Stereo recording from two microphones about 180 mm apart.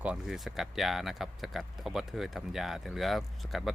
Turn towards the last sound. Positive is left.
turn(degrees=0)  # may be behind; listen again after turning